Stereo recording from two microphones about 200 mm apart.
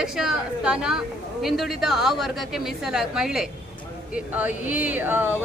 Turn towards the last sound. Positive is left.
turn(degrees=-10)  # may be behind; listen again after turning